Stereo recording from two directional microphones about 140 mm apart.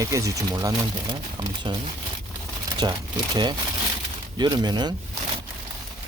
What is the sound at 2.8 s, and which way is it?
Speech, 30° right (ahead or behind).